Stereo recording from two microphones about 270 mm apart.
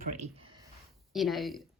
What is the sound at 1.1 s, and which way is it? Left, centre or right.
Speech, centre.